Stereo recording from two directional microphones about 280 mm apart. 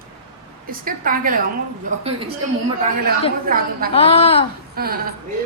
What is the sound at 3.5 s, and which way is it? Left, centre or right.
Speech, right.